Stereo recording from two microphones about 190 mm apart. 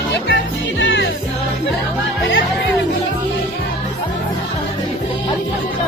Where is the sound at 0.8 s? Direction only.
70° left (ahead or behind).